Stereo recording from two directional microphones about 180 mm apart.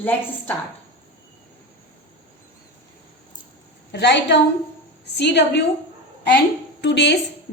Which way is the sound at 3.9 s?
70° left (ahead or behind).